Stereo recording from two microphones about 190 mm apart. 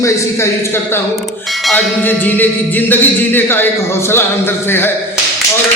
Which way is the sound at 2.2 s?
10° left (ahead or behind).